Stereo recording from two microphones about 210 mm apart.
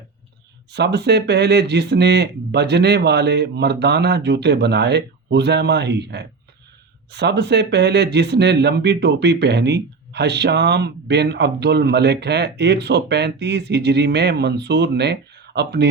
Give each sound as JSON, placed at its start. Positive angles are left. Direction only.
{"t": 0.7, "sound": "speech", "side_deg": -55}